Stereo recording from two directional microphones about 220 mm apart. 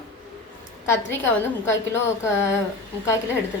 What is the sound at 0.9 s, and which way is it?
Speech, 10° left (ahead or behind).